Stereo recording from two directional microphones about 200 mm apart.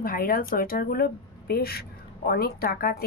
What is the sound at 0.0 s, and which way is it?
A woman's voice, 45° left (ahead or behind).